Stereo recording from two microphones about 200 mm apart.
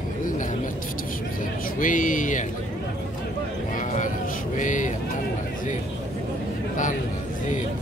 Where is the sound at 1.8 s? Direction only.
40° left (ahead or behind).